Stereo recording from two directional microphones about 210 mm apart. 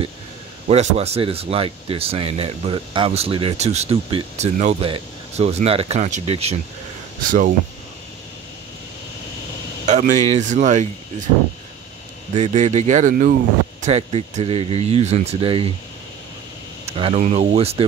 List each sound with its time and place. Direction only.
0.7 s speech: 30° right (ahead or behind)
9.8 s speech: 35° right (ahead or behind)
12.4 s speech: 35° right (ahead or behind)
16.8 s a sound: 25° right (ahead or behind)
17.2 s speech: 30° right (ahead or behind)